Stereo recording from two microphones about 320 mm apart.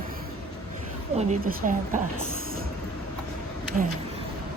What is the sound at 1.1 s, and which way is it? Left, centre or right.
Speech, right.